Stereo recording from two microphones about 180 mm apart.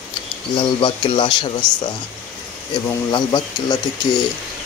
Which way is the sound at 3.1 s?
20° left (ahead or behind).